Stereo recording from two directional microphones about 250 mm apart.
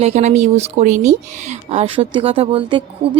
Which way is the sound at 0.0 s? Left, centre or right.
Right.